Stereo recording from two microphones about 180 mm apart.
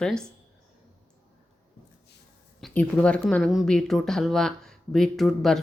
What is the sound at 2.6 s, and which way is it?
A woman's voice, 5° left (ahead or behind).